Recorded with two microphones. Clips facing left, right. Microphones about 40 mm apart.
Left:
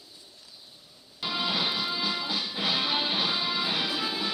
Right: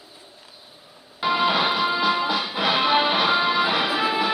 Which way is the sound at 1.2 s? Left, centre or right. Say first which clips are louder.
Right 9 dB; right.